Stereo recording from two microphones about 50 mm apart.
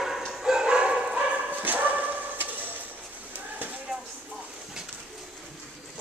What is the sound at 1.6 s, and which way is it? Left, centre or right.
Dog, right.